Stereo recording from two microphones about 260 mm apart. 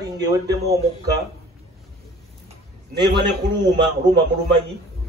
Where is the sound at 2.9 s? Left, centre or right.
Centre.